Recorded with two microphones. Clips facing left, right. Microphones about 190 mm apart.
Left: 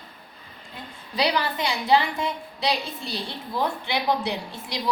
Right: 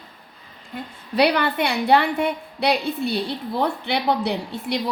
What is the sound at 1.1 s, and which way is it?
A woman's voice, 60° right (ahead or behind).